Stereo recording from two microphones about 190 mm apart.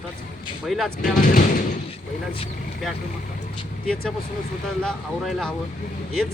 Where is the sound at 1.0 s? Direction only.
45° left (ahead or behind).